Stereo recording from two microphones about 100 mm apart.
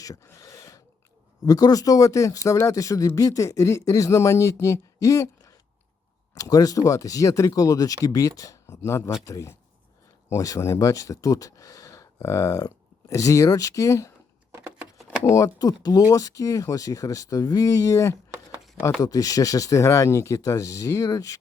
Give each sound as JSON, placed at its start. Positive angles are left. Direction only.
{"t": 0.0, "sound": "gasp", "side_deg": 35}
{"t": 1.5, "sound": "speech", "side_deg": 35}
{"t": 15.2, "sound": "speech", "side_deg": 35}